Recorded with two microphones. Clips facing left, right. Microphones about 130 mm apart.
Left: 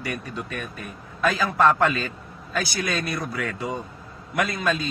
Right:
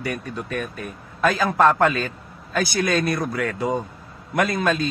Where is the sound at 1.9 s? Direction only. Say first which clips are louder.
Right 3 dB; 45° right (ahead or behind).